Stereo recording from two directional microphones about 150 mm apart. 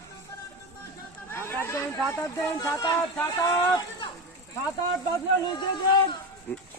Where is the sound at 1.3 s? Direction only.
15° left (ahead or behind).